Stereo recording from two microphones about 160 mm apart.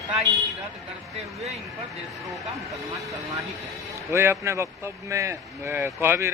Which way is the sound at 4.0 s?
15° right (ahead or behind).